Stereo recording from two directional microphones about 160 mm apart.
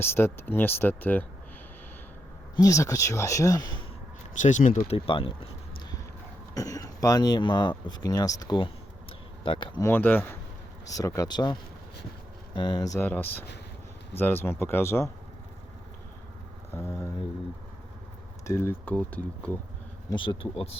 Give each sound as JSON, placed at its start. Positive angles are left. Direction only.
{"t": 0.0, "sound": "speech", "side_deg": 15}
{"t": 2.6, "sound": "speech", "side_deg": 20}
{"t": 4.4, "sound": "speech", "side_deg": 50}
{"t": 4.9, "sound": "speech", "side_deg": 35}
{"t": 6.5, "sound": "speech", "side_deg": 20}
{"t": 9.8, "sound": "speech", "side_deg": 10}
{"t": 12.5, "sound": "speech", "side_deg": 25}
{"t": 13.1, "sound": "speech", "side_deg": 10}
{"t": 16.7, "sound": "speech", "side_deg": 15}
{"t": 18.4, "sound": "speech", "side_deg": 15}
{"t": 20.1, "sound": "speech", "side_deg": 30}